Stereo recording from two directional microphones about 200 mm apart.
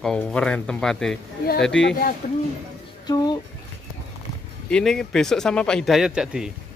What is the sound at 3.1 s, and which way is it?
Speech, 20° left (ahead or behind).